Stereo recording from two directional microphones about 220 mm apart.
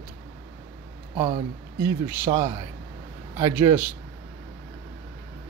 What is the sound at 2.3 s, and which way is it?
Speech, 25° right (ahead or behind).